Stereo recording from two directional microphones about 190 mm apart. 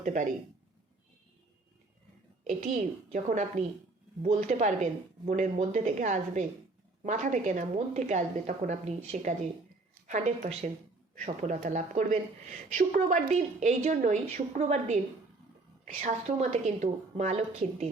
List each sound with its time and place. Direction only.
0.0 s speech: 40° right (ahead or behind)
2.4 s a woman's voice: 40° right (ahead or behind)